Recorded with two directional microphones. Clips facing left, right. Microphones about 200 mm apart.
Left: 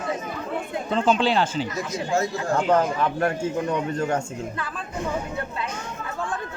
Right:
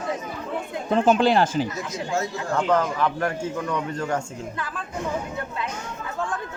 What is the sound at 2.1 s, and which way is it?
Speech, 45° left (ahead or behind).